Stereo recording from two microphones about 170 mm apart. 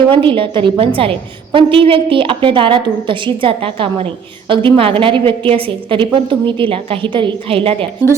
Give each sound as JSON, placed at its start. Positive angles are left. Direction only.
{"t": 0.1, "sound": "a woman's voice", "side_deg": -30}